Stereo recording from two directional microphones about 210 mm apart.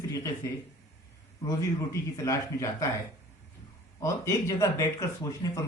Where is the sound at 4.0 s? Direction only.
15° left (ahead or behind).